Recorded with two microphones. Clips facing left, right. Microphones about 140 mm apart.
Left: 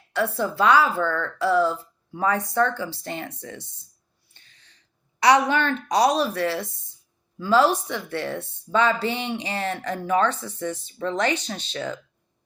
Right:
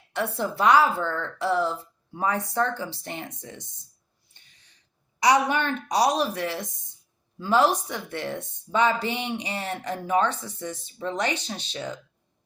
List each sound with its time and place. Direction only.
0.1 s a woman's voice: 20° right (ahead or behind)
0.9 s speech: 60° left (ahead or behind)
1.2 s a woman's voice: 20° right (ahead or behind)
5.2 s a woman's voice: 15° right (ahead or behind)